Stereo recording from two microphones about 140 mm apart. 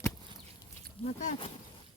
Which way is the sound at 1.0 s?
50° left (ahead or behind).